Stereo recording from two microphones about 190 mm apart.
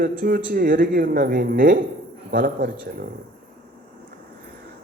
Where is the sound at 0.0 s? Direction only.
50° right (ahead or behind).